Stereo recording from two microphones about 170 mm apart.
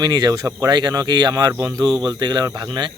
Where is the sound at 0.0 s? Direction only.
25° right (ahead or behind).